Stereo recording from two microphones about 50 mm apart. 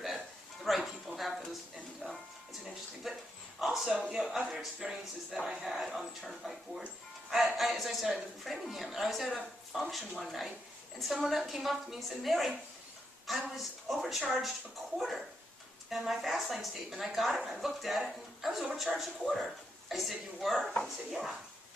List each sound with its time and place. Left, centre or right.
0.7 s music: centre
2.0 s music: right
2.6 s a sound: centre
4.3 s a man's voice: centre